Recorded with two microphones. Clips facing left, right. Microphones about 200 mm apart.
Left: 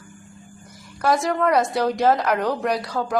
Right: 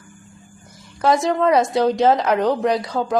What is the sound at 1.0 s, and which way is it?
A woman's voice, 20° right (ahead or behind).